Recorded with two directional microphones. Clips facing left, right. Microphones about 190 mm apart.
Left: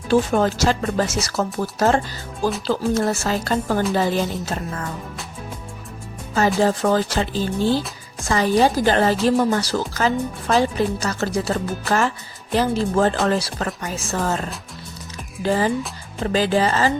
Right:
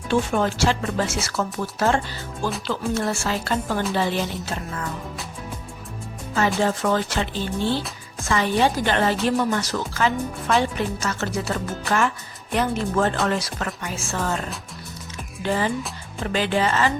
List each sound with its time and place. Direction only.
0.1 s speech: 40° left (ahead or behind)
6.6 s speech: 35° left (ahead or behind)
15.4 s speech: 35° left (ahead or behind)